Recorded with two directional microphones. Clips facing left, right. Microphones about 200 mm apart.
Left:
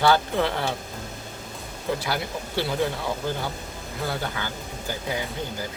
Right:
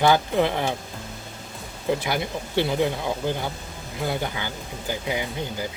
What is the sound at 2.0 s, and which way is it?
Speech, 20° right (ahead or behind).